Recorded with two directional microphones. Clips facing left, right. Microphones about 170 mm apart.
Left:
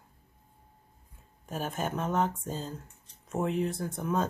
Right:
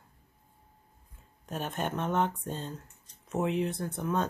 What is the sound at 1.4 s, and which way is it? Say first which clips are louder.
Speech: even; 5° left (ahead or behind).